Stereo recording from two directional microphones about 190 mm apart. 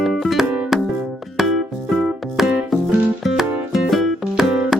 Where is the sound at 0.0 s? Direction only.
Centre (ahead or behind).